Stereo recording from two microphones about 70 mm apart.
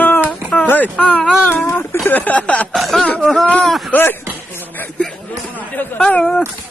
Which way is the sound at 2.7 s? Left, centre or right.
Centre.